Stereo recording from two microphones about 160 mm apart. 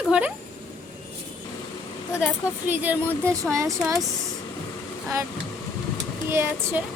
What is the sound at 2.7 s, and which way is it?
Speech, 15° right (ahead or behind).